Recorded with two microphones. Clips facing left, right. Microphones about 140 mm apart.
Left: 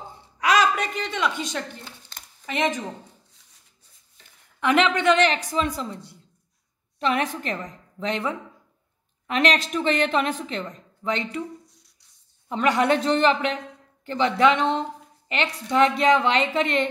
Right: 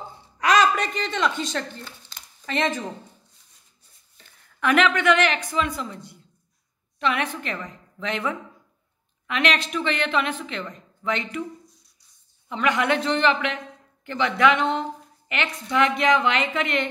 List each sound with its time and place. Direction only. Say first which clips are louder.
0.4 s speech: right 1 dB; 5° left (ahead or behind)
4.6 s a woman's voice: even; 25° left (ahead or behind)
12.4 s a woman's voice: left 2 dB; 40° left (ahead or behind)